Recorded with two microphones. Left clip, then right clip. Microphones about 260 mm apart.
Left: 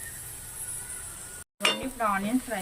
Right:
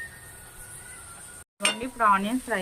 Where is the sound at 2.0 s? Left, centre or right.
Centre.